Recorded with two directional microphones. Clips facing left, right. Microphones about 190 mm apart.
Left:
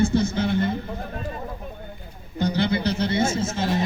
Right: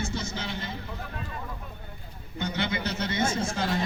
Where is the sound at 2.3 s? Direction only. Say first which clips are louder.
Left 8 dB; 35° left (ahead or behind).